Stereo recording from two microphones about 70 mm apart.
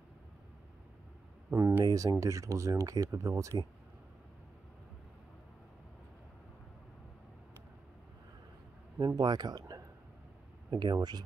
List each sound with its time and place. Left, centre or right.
1.5 s a sound: right
1.9 s speech: right
9.0 s speech: right
10.7 s speech: right